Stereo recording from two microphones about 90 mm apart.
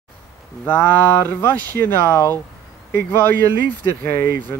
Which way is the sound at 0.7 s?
20° left (ahead or behind).